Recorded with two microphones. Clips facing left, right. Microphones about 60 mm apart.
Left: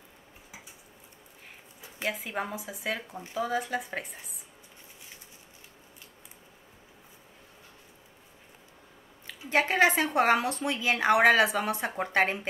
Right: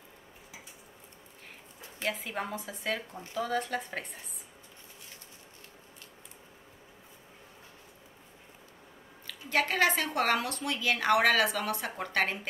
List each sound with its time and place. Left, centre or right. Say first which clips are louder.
2.0 s speech: left 2 dB; centre
9.3 s a woman's voice: left 3 dB; left